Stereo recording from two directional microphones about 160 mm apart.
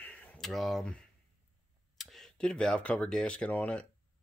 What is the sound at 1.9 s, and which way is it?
Speech, centre (ahead or behind).